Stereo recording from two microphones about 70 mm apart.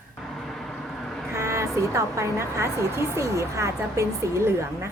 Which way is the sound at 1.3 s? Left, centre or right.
Right.